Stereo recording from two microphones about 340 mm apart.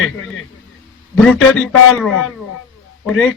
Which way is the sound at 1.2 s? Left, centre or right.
Centre.